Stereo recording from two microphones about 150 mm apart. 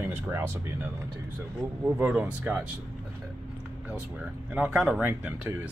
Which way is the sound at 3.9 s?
10° right (ahead or behind).